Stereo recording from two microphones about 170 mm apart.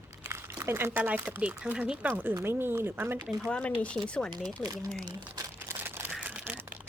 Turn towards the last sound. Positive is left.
turn(degrees=-10)  # may be behind; listen again after turning